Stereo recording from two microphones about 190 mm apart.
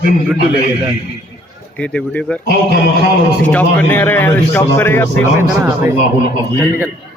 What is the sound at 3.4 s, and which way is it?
A man's voice, 10° left (ahead or behind).